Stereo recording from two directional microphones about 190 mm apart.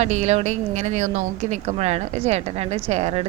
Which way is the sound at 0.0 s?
35° right (ahead or behind).